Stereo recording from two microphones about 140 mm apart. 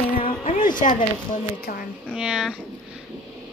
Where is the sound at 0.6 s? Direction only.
70° left (ahead or behind).